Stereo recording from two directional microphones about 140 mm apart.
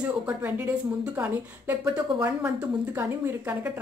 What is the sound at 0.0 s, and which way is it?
A woman's voice, 10° right (ahead or behind).